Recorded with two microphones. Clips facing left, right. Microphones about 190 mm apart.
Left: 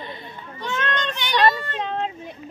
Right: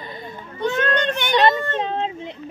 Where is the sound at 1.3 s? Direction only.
20° right (ahead or behind).